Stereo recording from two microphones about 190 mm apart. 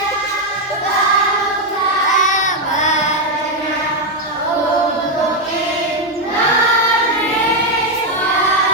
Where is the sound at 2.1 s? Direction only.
40° left (ahead or behind).